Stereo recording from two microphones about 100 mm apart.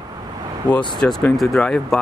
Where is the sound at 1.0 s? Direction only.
20° left (ahead or behind).